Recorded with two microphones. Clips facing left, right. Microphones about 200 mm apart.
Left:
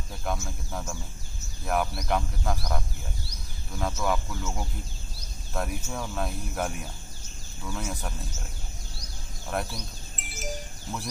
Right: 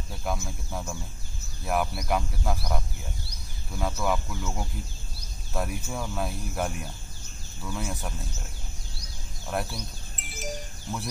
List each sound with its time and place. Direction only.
0.5 s speech: 5° right (ahead or behind)
9.5 s speech: centre (ahead or behind)
10.3 s music: centre (ahead or behind)